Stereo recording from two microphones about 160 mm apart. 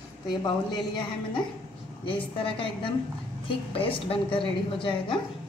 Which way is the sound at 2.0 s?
35° left (ahead or behind).